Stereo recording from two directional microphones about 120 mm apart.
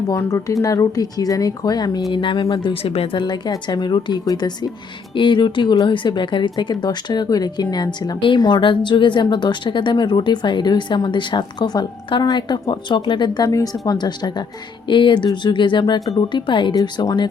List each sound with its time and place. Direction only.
0.1 s speech: 25° left (ahead or behind); by 2.6 s 45° left (ahead or behind)
2.6 s speech: 55° left (ahead or behind)
3.2 s a woman's voice: 40° left (ahead or behind)